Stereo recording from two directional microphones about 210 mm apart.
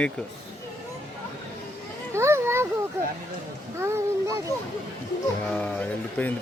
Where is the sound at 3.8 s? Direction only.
10° right (ahead or behind).